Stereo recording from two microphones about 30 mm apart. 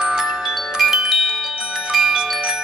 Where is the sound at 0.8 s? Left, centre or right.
Centre.